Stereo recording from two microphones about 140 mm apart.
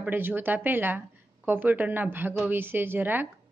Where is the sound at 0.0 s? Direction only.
15° right (ahead or behind).